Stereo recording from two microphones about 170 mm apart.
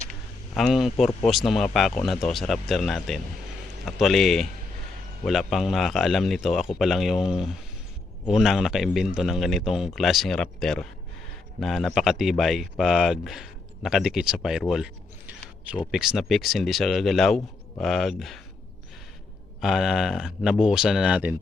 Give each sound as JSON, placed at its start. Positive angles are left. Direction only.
{"t": 0.5, "sound": "speech", "side_deg": 0}
{"t": 19.6, "sound": "speech", "side_deg": 0}